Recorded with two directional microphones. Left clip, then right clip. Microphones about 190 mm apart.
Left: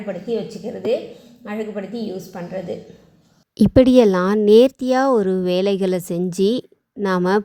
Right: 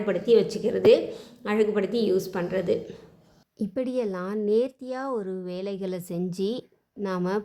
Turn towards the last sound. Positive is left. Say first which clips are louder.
# left 10 dB
turn(degrees=35)  # may be behind; listen again after turning